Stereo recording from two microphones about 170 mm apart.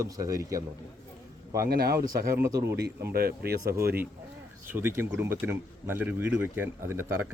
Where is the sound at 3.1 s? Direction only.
65° right (ahead or behind).